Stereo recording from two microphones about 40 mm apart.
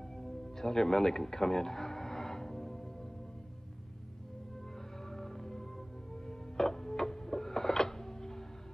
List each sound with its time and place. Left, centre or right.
0.2 s music: centre
5.1 s music: centre